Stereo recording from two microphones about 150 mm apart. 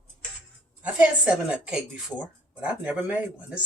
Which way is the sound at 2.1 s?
5° left (ahead or behind).